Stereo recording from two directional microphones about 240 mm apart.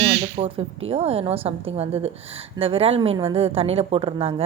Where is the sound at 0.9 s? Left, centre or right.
Right.